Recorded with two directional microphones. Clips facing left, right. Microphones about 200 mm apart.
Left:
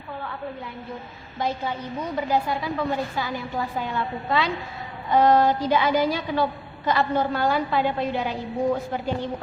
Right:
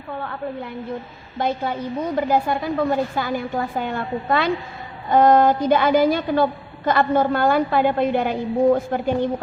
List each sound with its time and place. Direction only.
0.2 s a woman's voice: 50° right (ahead or behind)